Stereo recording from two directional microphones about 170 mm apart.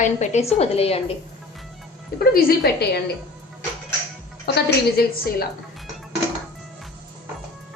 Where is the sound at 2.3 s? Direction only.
60° left (ahead or behind).